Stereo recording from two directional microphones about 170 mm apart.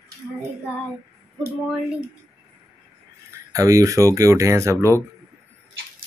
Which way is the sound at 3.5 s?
20° right (ahead or behind).